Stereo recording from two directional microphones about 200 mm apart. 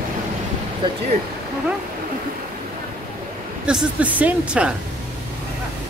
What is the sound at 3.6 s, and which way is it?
A woman's voice, 5° right (ahead or behind).